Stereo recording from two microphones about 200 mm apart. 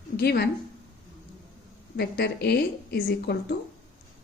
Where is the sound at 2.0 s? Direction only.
55° left (ahead or behind).